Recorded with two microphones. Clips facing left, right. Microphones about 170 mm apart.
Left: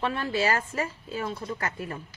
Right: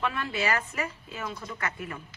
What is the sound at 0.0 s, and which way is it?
Speech, 35° left (ahead or behind).